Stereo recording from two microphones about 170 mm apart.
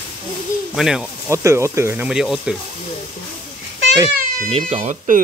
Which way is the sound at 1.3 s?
15° right (ahead or behind).